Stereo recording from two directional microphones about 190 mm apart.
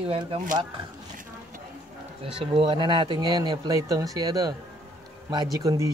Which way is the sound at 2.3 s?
25° right (ahead or behind).